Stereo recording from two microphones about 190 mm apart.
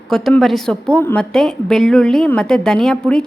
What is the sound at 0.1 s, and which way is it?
A woman's voice, centre (ahead or behind).